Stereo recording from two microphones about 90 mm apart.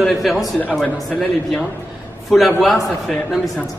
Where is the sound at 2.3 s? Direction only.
Centre (ahead or behind).